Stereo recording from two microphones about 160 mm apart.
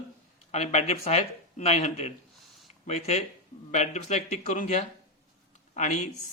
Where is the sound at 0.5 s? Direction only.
45° left (ahead or behind).